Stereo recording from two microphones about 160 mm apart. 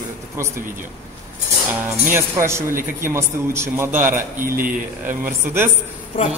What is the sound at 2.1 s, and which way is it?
A man's voice, 15° right (ahead or behind).